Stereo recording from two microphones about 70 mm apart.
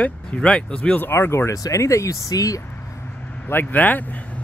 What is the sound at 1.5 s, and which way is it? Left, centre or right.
Speech, left.